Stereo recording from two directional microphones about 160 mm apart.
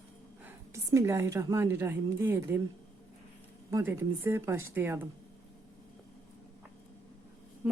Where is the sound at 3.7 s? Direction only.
15° right (ahead or behind).